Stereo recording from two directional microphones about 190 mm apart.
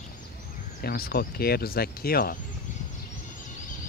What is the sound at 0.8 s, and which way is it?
Speech, 55° left (ahead or behind).